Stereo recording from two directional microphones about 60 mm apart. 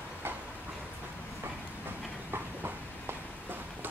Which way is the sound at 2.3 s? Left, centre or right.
Right.